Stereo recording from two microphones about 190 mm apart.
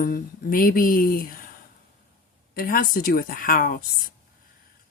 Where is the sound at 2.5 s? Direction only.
50° left (ahead or behind).